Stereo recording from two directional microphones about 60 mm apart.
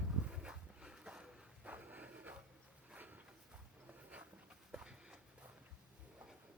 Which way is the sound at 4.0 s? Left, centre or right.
Right.